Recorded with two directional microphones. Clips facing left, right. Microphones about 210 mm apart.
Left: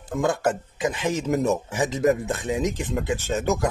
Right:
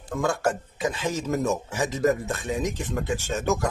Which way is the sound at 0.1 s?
20° left (ahead or behind).